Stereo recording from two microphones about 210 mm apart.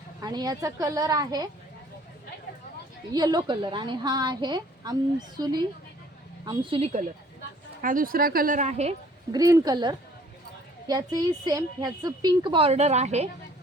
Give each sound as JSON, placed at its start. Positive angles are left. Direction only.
{"t": 0.2, "sound": "a woman's voice", "side_deg": -20}
{"t": 3.1, "sound": "a woman's voice", "side_deg": -20}
{"t": 7.8, "sound": "speech", "side_deg": -40}
{"t": 9.3, "sound": "a woman's voice", "side_deg": -15}